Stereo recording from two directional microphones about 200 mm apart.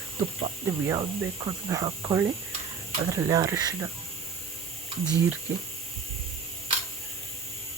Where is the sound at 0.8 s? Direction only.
15° right (ahead or behind).